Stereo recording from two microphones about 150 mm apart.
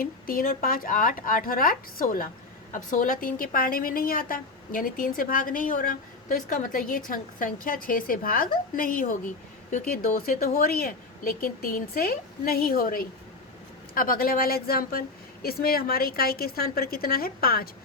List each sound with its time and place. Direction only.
0.0 s a woman's voice: 70° left (ahead or behind)